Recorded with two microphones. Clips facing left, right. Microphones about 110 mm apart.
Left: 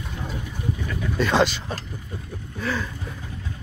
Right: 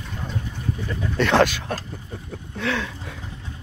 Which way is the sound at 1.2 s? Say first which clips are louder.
Right 2 dB; 60° right (ahead or behind).